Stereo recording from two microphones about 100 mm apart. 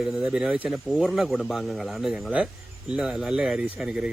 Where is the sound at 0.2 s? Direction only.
10° right (ahead or behind).